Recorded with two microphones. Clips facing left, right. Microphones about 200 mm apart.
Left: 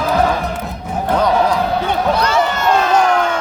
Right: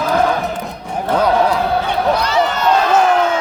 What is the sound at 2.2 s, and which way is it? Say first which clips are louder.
Run: even; 50° left (ahead or behind).